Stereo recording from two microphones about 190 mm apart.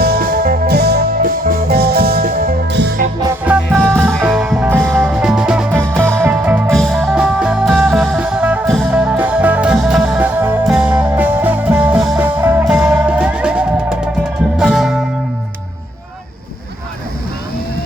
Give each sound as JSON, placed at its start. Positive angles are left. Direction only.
{"t": 0.0, "sound": "music", "side_deg": -55}
{"t": 3.4, "sound": "music", "side_deg": -5}
{"t": 3.8, "sound": "music", "side_deg": 5}
{"t": 6.2, "sound": "music", "side_deg": -10}